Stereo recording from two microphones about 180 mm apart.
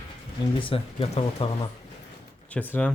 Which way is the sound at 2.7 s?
5° left (ahead or behind).